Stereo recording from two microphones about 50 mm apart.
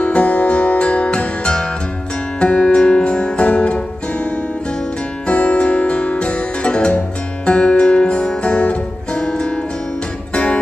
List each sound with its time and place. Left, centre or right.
0.0 s music: left